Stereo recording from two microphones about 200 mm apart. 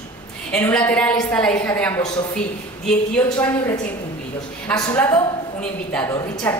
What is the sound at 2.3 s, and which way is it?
A woman's voice, 5° left (ahead or behind).